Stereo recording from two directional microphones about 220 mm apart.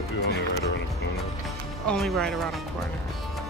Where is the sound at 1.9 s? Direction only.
Centre (ahead or behind).